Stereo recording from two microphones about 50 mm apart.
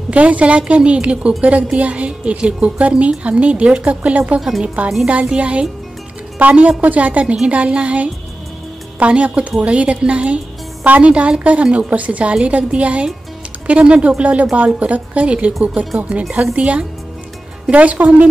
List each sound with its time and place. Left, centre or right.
0.1 s a woman's voice: right
4.4 s speech: centre
5.0 s a woman's voice: right